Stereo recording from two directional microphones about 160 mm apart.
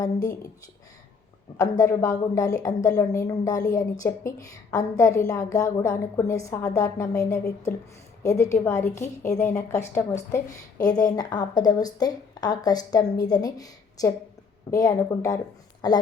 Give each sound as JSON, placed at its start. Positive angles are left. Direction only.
{"t": 0.0, "sound": "a woman's voice", "side_deg": 20}
{"t": 1.5, "sound": "a woman's voice", "side_deg": 20}